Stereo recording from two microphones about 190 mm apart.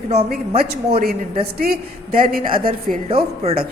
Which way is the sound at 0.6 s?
55° right (ahead or behind).